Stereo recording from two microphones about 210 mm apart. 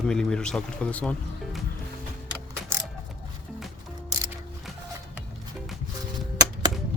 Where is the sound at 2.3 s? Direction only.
10° right (ahead or behind).